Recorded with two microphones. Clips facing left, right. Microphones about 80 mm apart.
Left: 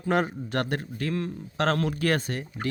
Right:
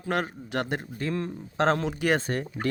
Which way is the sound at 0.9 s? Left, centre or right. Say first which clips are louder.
Even; right.